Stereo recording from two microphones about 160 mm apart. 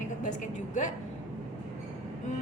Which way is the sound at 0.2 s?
50° left (ahead or behind).